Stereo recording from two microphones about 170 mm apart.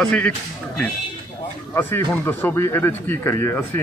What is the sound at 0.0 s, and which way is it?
Speech, 5° left (ahead or behind).